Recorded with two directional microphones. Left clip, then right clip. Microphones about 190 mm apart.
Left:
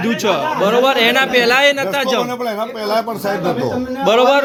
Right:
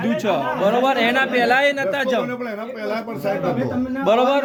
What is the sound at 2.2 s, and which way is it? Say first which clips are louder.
Speech: left 6 dB; 35° left (ahead or behind).